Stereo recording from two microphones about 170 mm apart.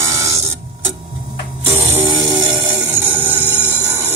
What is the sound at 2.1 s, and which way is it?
Music, 25° right (ahead or behind).